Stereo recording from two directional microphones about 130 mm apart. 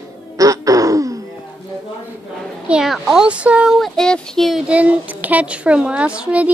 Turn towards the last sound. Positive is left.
turn(degrees=-10)  # may be behind; listen again after turning